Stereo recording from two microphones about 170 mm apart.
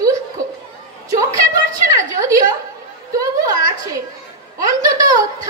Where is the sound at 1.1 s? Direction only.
20° right (ahead or behind).